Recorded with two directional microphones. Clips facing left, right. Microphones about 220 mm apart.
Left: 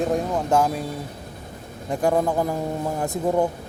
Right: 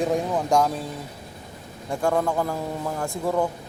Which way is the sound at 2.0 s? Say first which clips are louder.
Left 2 dB; 20° left (ahead or behind).